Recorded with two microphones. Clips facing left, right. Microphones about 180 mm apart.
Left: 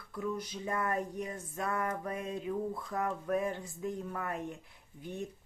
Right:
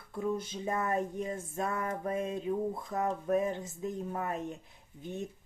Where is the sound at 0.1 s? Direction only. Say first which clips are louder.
Right 3 dB; 25° right (ahead or behind).